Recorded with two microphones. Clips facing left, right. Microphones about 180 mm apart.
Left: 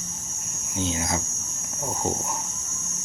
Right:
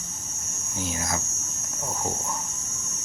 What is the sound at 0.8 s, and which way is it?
Speech, 25° left (ahead or behind).